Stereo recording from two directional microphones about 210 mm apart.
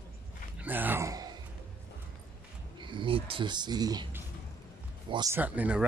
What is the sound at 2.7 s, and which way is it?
Speech, 20° right (ahead or behind).